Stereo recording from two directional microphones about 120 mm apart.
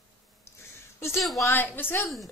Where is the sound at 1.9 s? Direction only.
Centre (ahead or behind).